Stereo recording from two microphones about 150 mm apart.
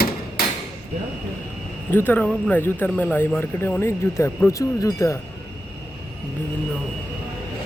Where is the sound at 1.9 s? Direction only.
15° left (ahead or behind).